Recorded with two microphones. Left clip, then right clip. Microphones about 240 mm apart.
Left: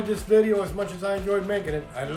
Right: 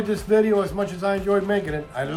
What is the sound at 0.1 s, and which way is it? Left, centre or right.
A man's voice, centre.